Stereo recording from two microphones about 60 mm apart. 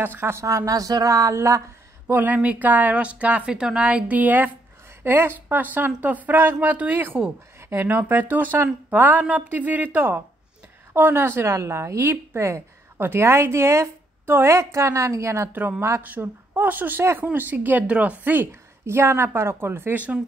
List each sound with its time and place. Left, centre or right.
0.0 s a woman's voice: right
0.4 s speech: right
2.0 s speech: right
3.5 s a woman's voice: centre
3.8 s a woman's voice: right
13.0 s a woman's voice: right
16.0 s a woman's voice: right
18.5 s a woman's voice: right